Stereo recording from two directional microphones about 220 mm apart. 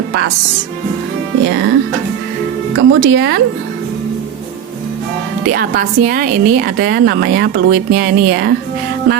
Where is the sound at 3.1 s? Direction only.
50° right (ahead or behind).